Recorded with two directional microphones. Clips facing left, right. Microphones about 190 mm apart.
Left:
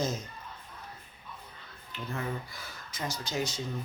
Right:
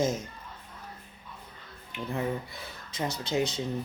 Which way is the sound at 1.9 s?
20° right (ahead or behind).